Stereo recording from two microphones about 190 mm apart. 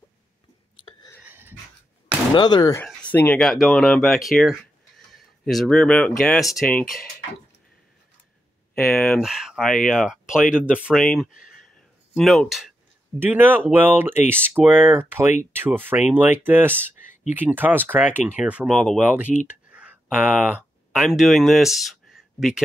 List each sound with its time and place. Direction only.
1.2 s dog: 10° right (ahead or behind)
2.3 s speech: 20° left (ahead or behind)
2.8 s speech: 10° left (ahead or behind)
8.7 s speech: 5° left (ahead or behind)